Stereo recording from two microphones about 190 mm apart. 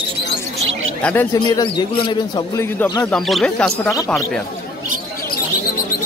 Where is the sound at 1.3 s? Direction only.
20° left (ahead or behind).